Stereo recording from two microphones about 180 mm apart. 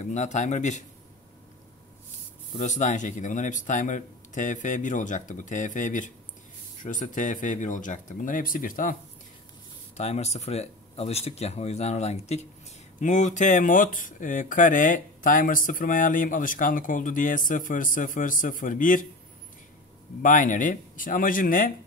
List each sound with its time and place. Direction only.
0.0 s speech: 40° left (ahead or behind)
2.6 s speech: 40° left (ahead or behind)
9.9 s speech: 40° left (ahead or behind)
20.2 s speech: 45° left (ahead or behind)